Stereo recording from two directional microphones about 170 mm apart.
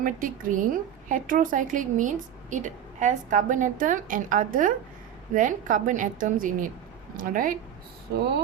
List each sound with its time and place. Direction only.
0.0 s a woman's voice: 50° right (ahead or behind)